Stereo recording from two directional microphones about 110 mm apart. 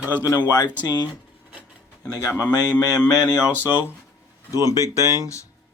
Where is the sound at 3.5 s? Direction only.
20° left (ahead or behind).